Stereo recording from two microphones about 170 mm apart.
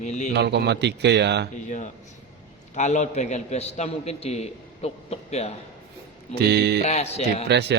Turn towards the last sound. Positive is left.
turn(degrees=-80)